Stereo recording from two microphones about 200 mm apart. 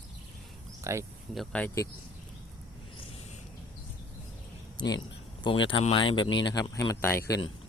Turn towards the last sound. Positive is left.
turn(degrees=10)  # may be behind; listen again after turning